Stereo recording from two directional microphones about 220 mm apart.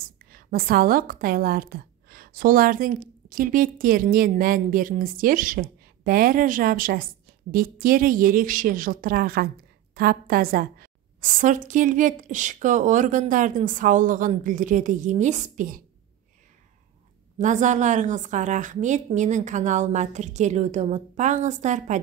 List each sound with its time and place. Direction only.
0.3 s a woman's voice: 40° right (ahead or behind)
17.4 s a woman's voice: 35° right (ahead or behind)